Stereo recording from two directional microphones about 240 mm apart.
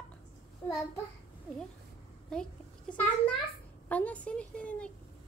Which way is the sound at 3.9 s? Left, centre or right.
Centre.